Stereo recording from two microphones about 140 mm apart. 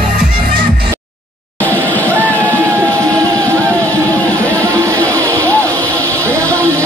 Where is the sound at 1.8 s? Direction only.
10° left (ahead or behind).